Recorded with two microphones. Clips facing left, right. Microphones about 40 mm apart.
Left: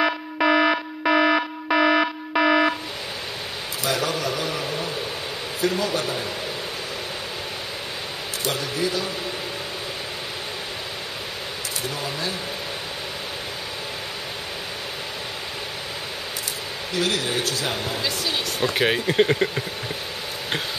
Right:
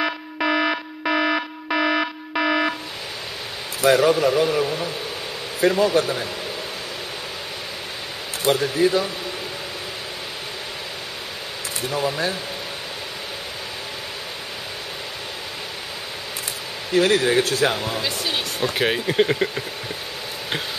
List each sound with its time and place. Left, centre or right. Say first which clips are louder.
0.0 s alarm: left 2 dB; centre
3.8 s speech: right 9 dB; right
4.5 s speech: right 6 dB; right
5.6 s speech: right 6 dB; right
8.5 s speech: right 7 dB; right
11.9 s speech: right 9 dB; right
16.9 s speech: right 7 dB; right
17.9 s speech: right 1 dB; centre
18.8 s speech: even; centre